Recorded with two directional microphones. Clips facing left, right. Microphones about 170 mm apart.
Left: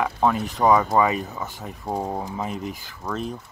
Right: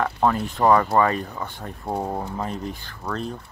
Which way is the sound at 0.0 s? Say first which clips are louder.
Even; 5° left (ahead or behind).